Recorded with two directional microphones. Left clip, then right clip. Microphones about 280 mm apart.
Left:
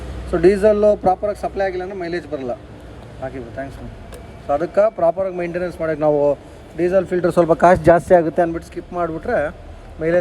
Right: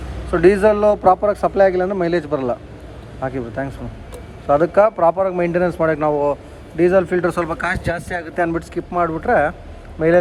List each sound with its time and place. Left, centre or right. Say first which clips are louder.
0.3 s a man's voice: right 1 dB; centre
7.5 s speech: left 10 dB; centre
8.4 s a man's voice: left 1 dB; centre